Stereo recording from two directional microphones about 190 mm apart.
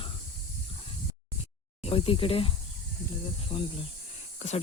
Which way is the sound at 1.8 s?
30° left (ahead or behind).